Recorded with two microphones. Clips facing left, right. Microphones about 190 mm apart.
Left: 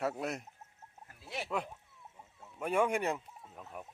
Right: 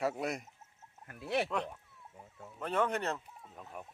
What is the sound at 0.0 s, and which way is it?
Speech, centre (ahead or behind).